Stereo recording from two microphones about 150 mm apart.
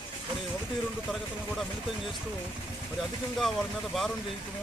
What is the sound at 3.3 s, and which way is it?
Speech, centre (ahead or behind).